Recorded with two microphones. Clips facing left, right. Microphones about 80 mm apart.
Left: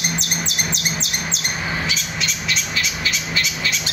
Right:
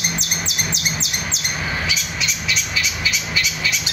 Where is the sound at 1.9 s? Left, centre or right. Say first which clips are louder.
Even; left.